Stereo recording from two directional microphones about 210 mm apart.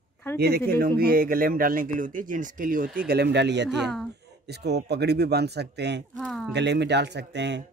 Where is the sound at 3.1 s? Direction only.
55° right (ahead or behind).